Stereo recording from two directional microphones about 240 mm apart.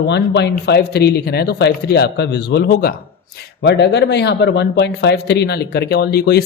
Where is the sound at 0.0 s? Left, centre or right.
Left.